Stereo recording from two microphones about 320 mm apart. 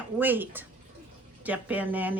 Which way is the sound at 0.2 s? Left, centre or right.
Centre.